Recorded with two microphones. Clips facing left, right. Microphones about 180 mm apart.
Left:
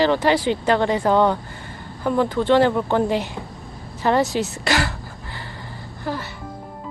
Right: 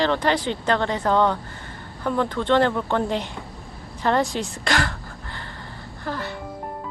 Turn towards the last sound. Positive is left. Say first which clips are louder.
# left 2 dB
turn(degrees=10)  # may be behind; listen again after turning